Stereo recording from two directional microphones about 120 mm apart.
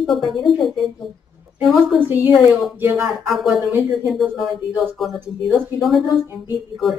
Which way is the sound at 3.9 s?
Centre (ahead or behind).